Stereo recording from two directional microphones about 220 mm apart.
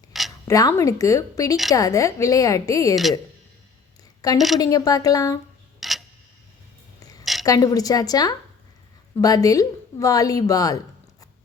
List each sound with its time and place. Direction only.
0.1 s a sound: centre (ahead or behind)
0.4 s a woman's voice: 15° left (ahead or behind)
2.9 s speech: centre (ahead or behind)
4.4 s a woman's voice: centre (ahead or behind)
4.6 s a woman's voice: 15° left (ahead or behind)
5.8 s tick-tock: centre (ahead or behind)
7.4 s a woman's voice: 15° left (ahead or behind)